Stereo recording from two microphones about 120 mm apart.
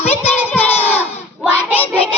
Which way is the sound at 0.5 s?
15° left (ahead or behind).